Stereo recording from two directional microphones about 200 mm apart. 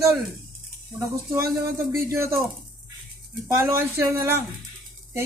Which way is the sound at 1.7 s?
15° right (ahead or behind).